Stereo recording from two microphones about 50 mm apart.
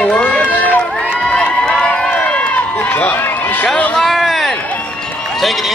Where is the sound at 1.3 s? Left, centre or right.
Centre.